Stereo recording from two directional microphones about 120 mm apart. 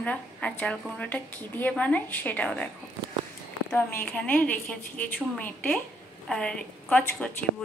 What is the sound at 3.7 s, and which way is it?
A woman's voice, 15° left (ahead or behind).